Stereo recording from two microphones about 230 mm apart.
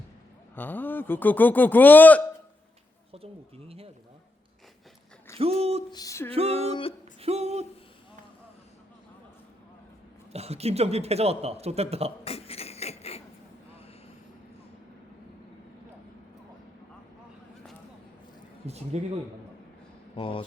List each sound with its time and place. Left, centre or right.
0.5 s speech: centre
3.1 s speech: right
5.4 s speech: right
5.9 s speech: centre
6.3 s speech: right
7.2 s a sound: right
10.3 s speech: right
12.2 s beatboxing: left
18.9 s speech: right
20.1 s speech: left